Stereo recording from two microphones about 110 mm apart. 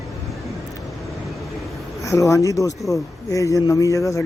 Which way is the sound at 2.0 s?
30° left (ahead or behind).